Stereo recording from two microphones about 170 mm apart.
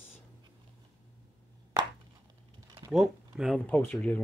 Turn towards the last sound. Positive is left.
turn(degrees=10)  # may be behind; listen again after turning